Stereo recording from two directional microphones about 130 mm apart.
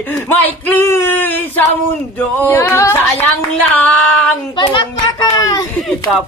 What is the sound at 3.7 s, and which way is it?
Speech, 15° left (ahead or behind).